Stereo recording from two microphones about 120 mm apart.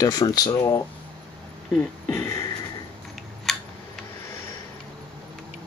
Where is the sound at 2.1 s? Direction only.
25° left (ahead or behind).